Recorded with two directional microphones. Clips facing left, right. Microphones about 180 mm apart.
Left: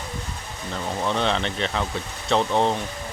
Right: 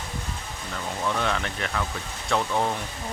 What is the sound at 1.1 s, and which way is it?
Speech, 30° left (ahead or behind).